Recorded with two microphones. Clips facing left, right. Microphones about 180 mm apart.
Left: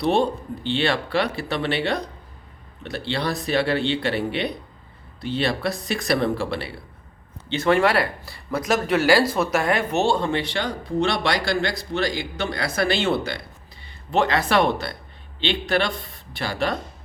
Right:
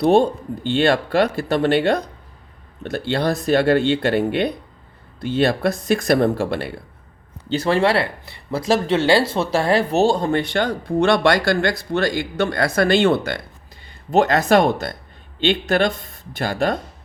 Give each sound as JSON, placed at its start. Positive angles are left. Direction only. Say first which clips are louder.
{"t": 0.0, "sound": "speech", "louder": "right 5 dB", "side_deg": -45}
{"t": 7.4, "sound": "speech", "louder": "right 1 dB", "side_deg": -35}